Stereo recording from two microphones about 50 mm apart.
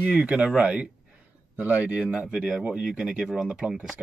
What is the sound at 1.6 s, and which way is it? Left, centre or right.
Speech, right.